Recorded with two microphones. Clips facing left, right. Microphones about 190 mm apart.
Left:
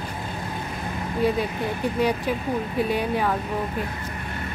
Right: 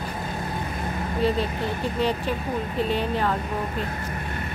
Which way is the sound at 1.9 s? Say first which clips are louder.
Left 2 dB; 10° left (ahead or behind).